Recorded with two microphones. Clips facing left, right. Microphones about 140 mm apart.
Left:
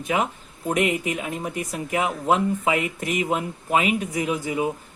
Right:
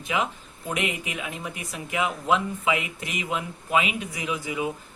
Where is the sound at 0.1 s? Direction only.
45° left (ahead or behind).